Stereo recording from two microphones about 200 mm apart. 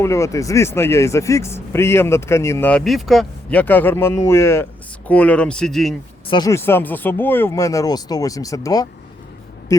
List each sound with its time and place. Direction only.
0.0 s speech: 15° left (ahead or behind)
6.2 s speech: 20° left (ahead or behind)